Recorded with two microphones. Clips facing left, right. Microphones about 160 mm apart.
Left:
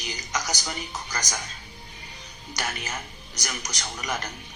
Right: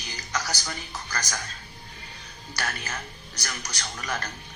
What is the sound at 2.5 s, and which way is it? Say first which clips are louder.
Speech: left 1 dB; 15° left (ahead or behind).